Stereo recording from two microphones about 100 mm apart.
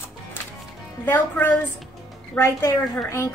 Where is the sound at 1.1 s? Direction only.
20° left (ahead or behind).